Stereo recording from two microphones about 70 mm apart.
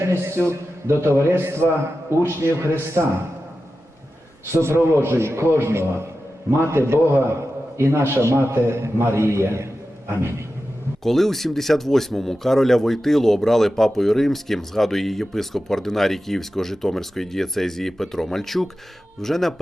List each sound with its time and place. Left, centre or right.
0.0 s a man's voice: right
4.5 s a man's voice: right
11.0 s speech: centre